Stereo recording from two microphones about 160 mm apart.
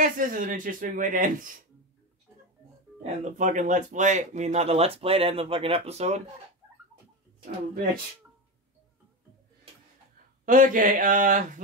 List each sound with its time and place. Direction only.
0.0 s speech: 55° right (ahead or behind)
3.0 s speech: 50° right (ahead or behind)
10.4 s speech: 55° right (ahead or behind)